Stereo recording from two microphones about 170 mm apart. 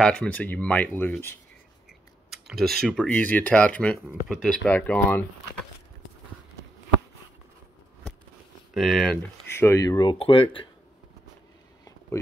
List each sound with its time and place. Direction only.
0.0 s speech: 5° left (ahead or behind)
2.3 s speech: centre (ahead or behind)
8.7 s speech: centre (ahead or behind)
9.5 s speech: 15° left (ahead or behind); by 10.7 s 30° left (ahead or behind)